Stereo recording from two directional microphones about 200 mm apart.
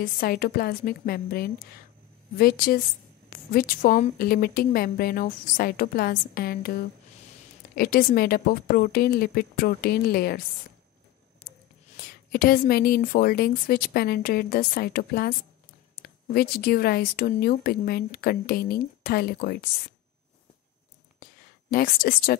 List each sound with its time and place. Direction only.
0.0 s speech: 45° left (ahead or behind)
12.0 s speech: 50° left (ahead or behind)
21.2 s a sound: 45° left (ahead or behind)